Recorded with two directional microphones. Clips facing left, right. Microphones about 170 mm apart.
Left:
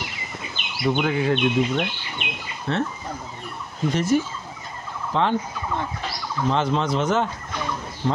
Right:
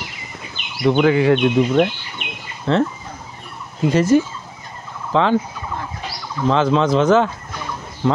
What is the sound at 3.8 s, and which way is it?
Speech, 90° right.